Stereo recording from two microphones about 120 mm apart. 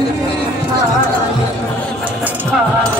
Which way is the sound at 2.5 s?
5° right (ahead or behind).